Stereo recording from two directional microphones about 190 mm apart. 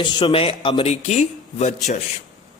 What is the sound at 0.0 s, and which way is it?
A man's voice, 25° left (ahead or behind).